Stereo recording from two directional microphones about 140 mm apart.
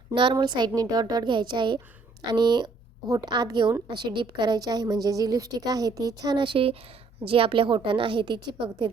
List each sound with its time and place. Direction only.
0.1 s a woman's voice: 35° right (ahead or behind)